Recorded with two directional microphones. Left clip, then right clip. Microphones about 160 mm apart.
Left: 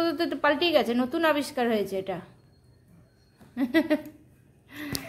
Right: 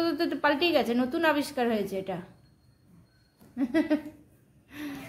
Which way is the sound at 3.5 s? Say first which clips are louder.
Left 2 dB; 20° left (ahead or behind).